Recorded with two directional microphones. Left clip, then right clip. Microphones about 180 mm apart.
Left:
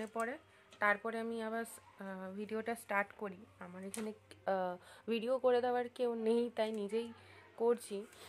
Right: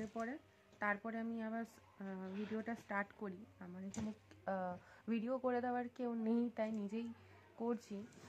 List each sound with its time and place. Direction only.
0.0 s speech: 25° left (ahead or behind)